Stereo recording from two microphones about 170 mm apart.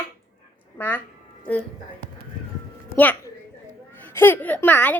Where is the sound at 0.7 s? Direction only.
10° left (ahead or behind).